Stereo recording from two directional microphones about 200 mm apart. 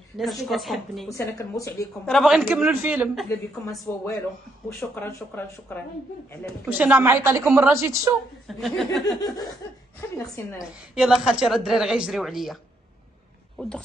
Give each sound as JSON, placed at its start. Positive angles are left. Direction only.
{"t": 0.2, "sound": "a woman's voice", "side_deg": 0}
{"t": 1.1, "sound": "speech", "side_deg": 15}
{"t": 2.0, "sound": "a woman's voice", "side_deg": 0}
{"t": 3.9, "sound": "speech", "side_deg": 10}
{"t": 6.7, "sound": "a woman's voice", "side_deg": -10}
{"t": 8.5, "sound": "a woman's voice", "side_deg": 0}
{"t": 9.9, "sound": "speech", "side_deg": 10}
{"t": 10.6, "sound": "a woman's voice", "side_deg": -5}
{"t": 13.6, "sound": "speech", "side_deg": 5}